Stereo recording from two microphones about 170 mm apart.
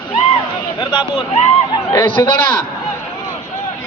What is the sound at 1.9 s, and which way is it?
Speech, 15° left (ahead or behind).